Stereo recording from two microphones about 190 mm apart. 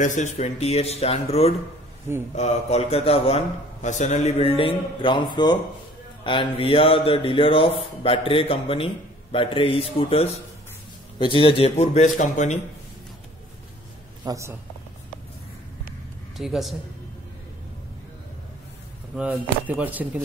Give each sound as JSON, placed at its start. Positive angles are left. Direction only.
{"t": 0.0, "sound": "a man's voice", "side_deg": 40}
{"t": 14.2, "sound": "speech", "side_deg": -15}
{"t": 16.3, "sound": "a man's voice", "side_deg": 0}
{"t": 19.1, "sound": "speech", "side_deg": -10}